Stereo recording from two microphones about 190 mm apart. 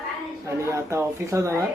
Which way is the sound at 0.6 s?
15° right (ahead or behind).